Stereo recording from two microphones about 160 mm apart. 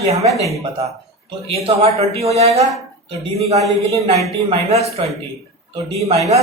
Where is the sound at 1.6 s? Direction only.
40° right (ahead or behind).